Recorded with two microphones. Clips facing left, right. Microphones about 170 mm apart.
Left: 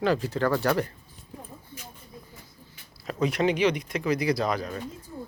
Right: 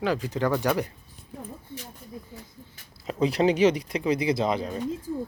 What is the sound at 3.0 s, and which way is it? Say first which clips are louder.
Speech: right 2 dB; 25° right (ahead or behind).